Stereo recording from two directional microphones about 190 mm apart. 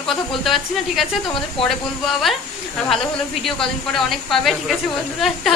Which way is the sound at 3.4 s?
Centre (ahead or behind).